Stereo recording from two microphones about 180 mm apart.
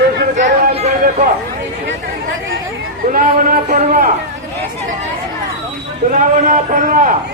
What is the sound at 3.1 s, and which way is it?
Speech, 50° right (ahead or behind).